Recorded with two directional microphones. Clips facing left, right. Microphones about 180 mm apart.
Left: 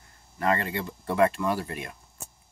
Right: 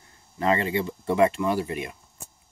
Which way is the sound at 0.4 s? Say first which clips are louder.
Right 3 dB; 20° right (ahead or behind).